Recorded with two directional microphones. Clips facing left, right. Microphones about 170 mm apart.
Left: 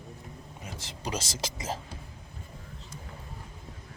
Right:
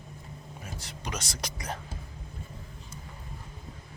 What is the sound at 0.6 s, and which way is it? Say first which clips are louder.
Speech: left 1 dB; 25° left (ahead or behind).